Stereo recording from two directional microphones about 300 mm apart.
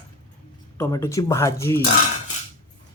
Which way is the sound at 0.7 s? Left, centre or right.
Centre.